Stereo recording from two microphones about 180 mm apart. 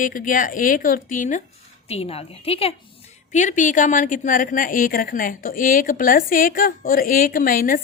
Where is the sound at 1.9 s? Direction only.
35° left (ahead or behind).